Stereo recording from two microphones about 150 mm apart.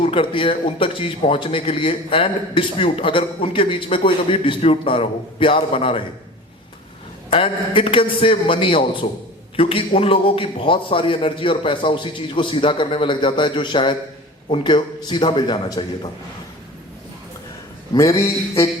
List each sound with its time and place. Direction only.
0.0 s a man's voice: 35° left (ahead or behind)
7.3 s a man's voice: 35° left (ahead or behind)
17.9 s speech: 20° left (ahead or behind)